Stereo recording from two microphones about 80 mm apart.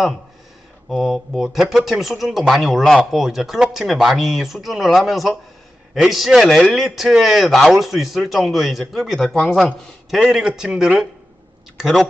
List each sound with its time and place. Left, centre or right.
0.8 s speech: centre
10.1 s a man's voice: centre